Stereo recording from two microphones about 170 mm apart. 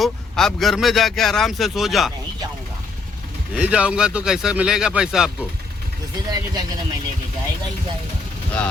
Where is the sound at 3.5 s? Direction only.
5° right (ahead or behind).